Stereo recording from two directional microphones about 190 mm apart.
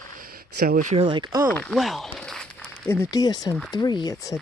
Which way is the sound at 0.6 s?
55° right (ahead or behind).